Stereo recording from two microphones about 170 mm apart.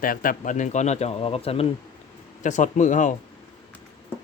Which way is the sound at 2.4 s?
45° left (ahead or behind).